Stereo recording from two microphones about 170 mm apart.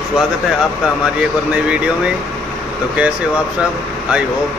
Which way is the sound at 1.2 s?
5° right (ahead or behind).